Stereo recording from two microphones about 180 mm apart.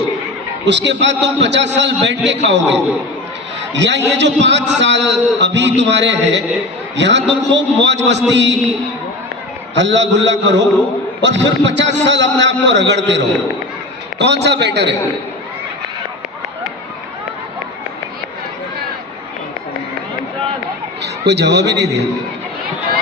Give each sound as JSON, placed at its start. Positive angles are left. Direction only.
{"t": 0.6, "sound": "a man's voice", "side_deg": -75}
{"t": 3.8, "sound": "a man's voice", "side_deg": -75}
{"t": 9.7, "sound": "a man's voice", "side_deg": -85}
{"t": 21.0, "sound": "a man's voice", "side_deg": -70}